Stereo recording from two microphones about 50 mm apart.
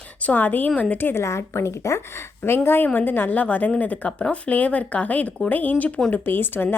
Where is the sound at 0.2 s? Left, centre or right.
Left.